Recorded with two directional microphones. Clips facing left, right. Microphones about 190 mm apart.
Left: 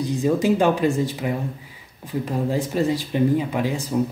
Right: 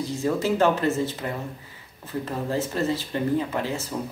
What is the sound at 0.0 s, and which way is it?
Speech, 15° left (ahead or behind).